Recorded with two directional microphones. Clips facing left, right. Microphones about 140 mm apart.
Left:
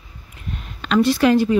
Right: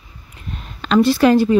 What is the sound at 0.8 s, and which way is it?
Speech, 35° right (ahead or behind).